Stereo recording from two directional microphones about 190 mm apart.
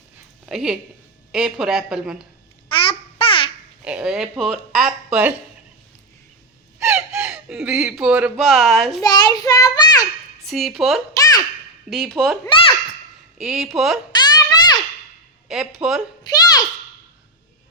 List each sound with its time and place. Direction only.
0.4 s speech: 5° right (ahead or behind)
2.6 s babbling: 25° left (ahead or behind)
3.8 s speech: 5° right (ahead or behind)
6.8 s speech: 5° right (ahead or behind)
9.0 s a child's voice: 20° left (ahead or behind)
10.4 s speech: centre (ahead or behind)
11.1 s babbling: 20° left (ahead or behind)
11.9 s speech: centre (ahead or behind)
12.5 s a child's voice: 30° left (ahead or behind)
13.4 s speech: centre (ahead or behind)
14.1 s a sound: 20° left (ahead or behind)
15.5 s a sound: 5° right (ahead or behind)
16.2 s a sound: 20° left (ahead or behind)